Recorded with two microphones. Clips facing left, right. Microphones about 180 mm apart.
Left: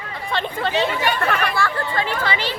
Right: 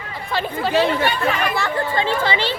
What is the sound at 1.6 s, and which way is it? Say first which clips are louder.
Speech: right 1 dB; 20° right (ahead or behind).